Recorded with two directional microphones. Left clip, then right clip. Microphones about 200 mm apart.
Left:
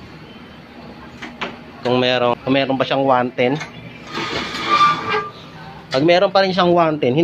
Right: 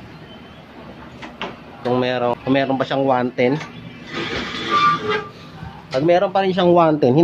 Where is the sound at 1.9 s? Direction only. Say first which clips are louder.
Left 3 dB; 5° left (ahead or behind).